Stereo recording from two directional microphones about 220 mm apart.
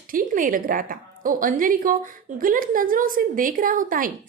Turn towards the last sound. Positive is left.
turn(degrees=-40)  # may be behind; listen again after turning